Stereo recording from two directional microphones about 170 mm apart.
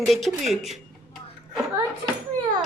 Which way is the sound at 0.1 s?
Centre (ahead or behind).